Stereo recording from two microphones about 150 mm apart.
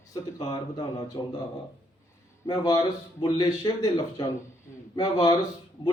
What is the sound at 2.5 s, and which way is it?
Speech, 25° left (ahead or behind).